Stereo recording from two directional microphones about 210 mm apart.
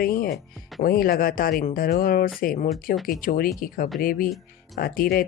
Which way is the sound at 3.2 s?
45° left (ahead or behind).